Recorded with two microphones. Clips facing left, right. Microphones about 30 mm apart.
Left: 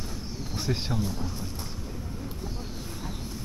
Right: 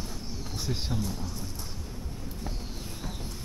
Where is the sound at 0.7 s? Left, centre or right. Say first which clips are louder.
Left 3 dB; centre.